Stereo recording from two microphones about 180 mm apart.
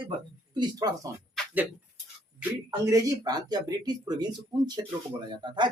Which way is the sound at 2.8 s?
20° right (ahead or behind).